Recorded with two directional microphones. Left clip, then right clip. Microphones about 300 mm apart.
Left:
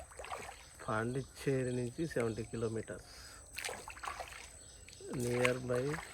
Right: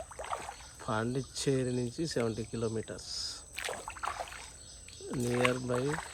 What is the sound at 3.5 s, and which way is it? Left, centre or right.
Rowboat, right.